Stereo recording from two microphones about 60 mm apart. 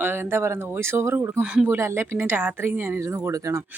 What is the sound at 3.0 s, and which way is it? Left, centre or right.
Speech, right.